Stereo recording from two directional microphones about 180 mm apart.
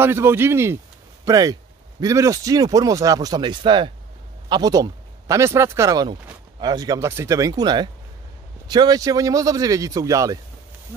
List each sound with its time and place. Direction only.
0.0 s speech: 15° right (ahead or behind)